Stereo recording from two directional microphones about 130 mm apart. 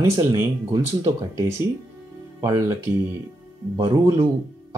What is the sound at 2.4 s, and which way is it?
Speech, 25° right (ahead or behind).